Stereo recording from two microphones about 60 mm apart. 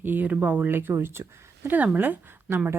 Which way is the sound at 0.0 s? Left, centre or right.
Right.